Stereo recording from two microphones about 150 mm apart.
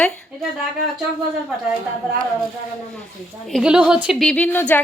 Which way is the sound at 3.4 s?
Centre (ahead or behind).